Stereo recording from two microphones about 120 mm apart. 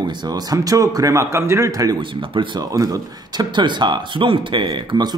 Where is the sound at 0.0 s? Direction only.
35° right (ahead or behind).